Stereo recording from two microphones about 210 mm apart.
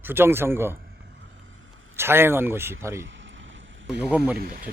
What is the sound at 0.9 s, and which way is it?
Vehicle, 55° right (ahead or behind).